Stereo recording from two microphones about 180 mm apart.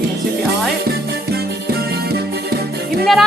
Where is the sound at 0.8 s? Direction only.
60° right (ahead or behind).